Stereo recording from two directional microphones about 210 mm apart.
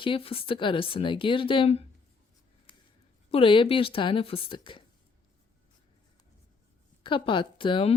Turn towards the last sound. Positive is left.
turn(degrees=25)  # may be behind; listen again after turning